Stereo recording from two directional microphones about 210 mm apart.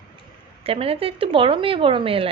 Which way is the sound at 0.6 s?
25° right (ahead or behind).